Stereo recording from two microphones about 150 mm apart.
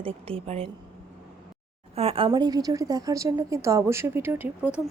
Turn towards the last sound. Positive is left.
turn(degrees=-10)  # may be behind; listen again after turning